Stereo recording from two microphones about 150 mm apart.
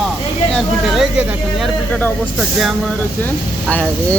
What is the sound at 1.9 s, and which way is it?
Speech, 10° left (ahead or behind).